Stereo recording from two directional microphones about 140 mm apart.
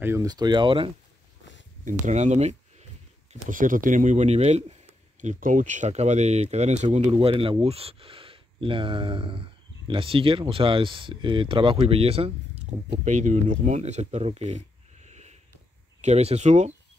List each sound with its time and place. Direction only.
0.0 s speech: 20° right (ahead or behind)
0.3 s speech: 30° right (ahead or behind)
1.9 s speech: 60° right (ahead or behind)
3.4 s speech: 70° right (ahead or behind); by 4.7 s 50° right (ahead or behind)
5.2 s speech: 65° right (ahead or behind)